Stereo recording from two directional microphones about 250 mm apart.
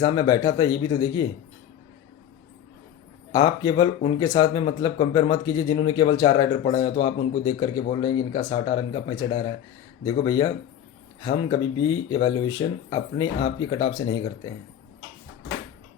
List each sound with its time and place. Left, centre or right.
0.0 s speech: centre
3.3 s speech: centre